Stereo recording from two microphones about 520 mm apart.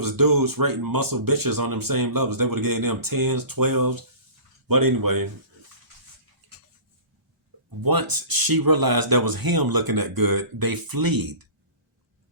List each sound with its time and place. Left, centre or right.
0.0 s speech: right
6.4 s dishes: right
7.8 s speech: right